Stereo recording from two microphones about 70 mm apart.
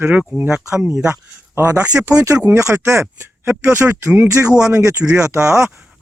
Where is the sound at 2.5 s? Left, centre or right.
Right.